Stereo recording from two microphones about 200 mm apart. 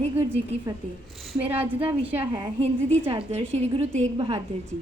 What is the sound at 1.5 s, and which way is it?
A woman's voice, 10° right (ahead or behind).